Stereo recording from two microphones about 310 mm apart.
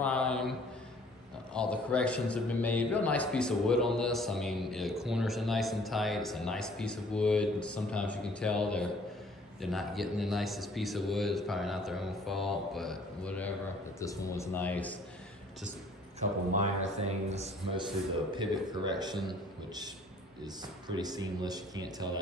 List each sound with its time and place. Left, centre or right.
0.0 s mantra: centre
1.5 s a man's voice: centre
16.2 s a man's voice: right